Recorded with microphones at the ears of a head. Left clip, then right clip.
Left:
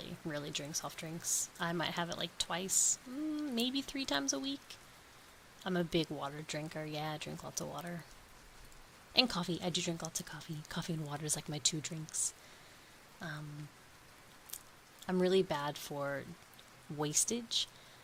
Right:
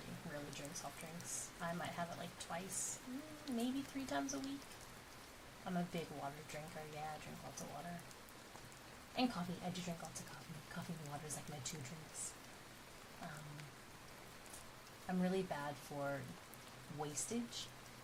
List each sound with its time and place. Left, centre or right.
0.0 s speech: left
9.1 s speech: left
15.0 s speech: left